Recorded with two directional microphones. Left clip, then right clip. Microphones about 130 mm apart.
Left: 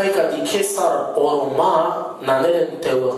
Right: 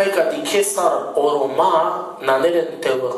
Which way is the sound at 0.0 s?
15° right (ahead or behind).